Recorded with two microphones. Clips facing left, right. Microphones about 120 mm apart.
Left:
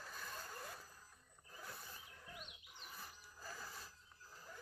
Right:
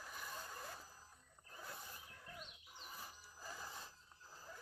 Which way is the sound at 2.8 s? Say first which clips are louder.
Right 1 dB; 15° right (ahead or behind).